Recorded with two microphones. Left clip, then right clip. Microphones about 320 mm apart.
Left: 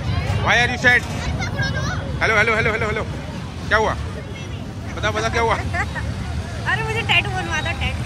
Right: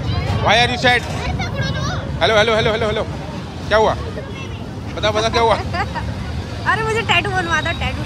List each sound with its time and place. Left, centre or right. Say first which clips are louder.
0.5 s speech: right 2 dB; centre
1.4 s a sound: right 1 dB; right
2.1 s speech: right 3 dB; centre
5.0 s speech: right 4 dB; centre
6.6 s vehicle: right 4 dB; right